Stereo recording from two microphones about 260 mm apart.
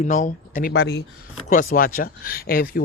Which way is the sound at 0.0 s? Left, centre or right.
Left.